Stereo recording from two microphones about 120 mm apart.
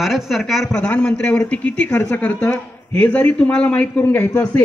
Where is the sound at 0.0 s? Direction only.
Centre (ahead or behind).